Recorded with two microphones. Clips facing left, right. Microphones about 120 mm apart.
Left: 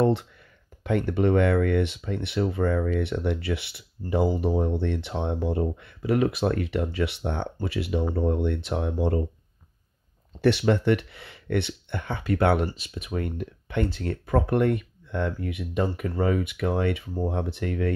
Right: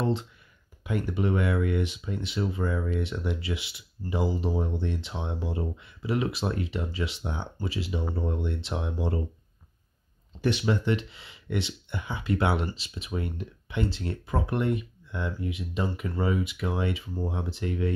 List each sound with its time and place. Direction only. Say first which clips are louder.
0.0 s speech: left 6 dB; 60° left (ahead or behind)
10.4 s speech: left 5 dB; 65° left (ahead or behind)